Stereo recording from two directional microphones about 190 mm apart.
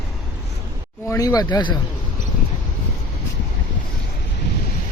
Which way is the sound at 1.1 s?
20° left (ahead or behind).